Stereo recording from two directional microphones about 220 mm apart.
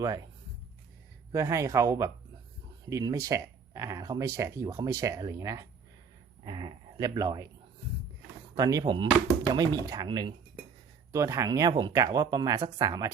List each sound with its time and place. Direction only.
0.0 s speech: 15° right (ahead or behind)
1.3 s speech: 15° right (ahead or behind)
8.5 s speech: 15° right (ahead or behind)